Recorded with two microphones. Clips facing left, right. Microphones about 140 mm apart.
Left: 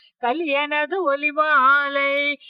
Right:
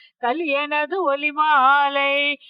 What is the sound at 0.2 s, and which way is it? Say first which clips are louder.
Speech: even; centre (ahead or behind).